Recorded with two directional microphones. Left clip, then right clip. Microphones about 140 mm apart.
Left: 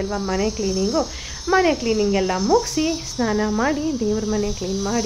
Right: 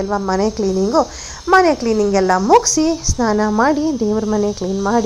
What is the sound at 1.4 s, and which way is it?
A woman's voice, 10° right (ahead or behind).